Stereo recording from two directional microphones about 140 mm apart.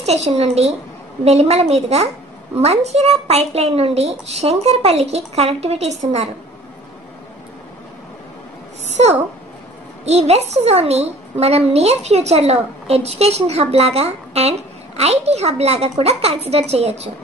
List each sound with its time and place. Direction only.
0.0 s a woman's voice: 50° right (ahead or behind)
8.8 s a sound: 55° right (ahead or behind)
10.0 s a woman's voice: 50° right (ahead or behind)